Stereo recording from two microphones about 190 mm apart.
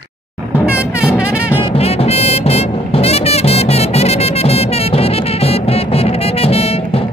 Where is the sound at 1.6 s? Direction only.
30° left (ahead or behind).